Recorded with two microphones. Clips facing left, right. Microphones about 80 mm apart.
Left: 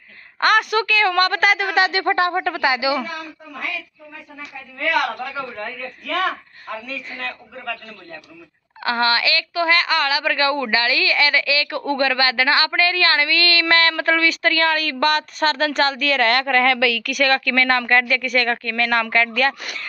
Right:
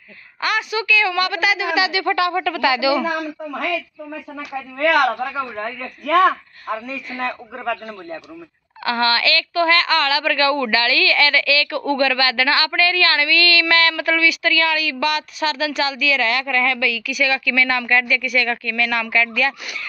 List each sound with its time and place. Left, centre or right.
0.4 s a woman's voice: left
5.2 s a woman's voice: right
5.6 s speech: right
8.8 s a woman's voice: left